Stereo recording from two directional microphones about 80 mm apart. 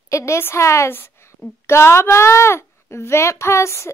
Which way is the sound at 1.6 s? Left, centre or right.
Left.